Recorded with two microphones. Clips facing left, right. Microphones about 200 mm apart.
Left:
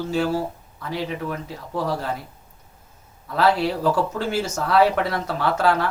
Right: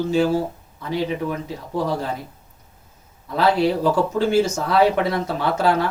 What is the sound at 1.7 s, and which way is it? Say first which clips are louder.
Speech: right 2 dB; 20° right (ahead or behind).